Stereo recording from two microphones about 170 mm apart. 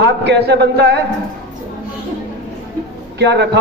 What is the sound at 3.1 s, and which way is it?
Speech, 80° right.